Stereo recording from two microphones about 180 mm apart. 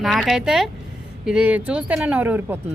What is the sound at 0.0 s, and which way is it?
Speech, centre (ahead or behind).